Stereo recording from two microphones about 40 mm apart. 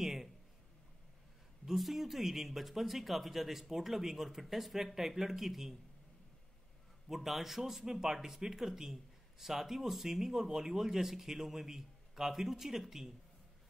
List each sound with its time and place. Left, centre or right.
0.0 s a sound: centre
1.7 s speech: centre
7.1 s speech: centre